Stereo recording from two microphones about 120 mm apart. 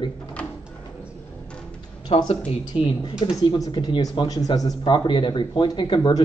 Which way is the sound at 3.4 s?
40° left (ahead or behind).